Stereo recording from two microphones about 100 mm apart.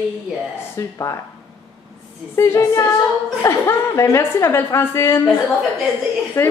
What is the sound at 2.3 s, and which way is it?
A woman's voice, 30° left (ahead or behind).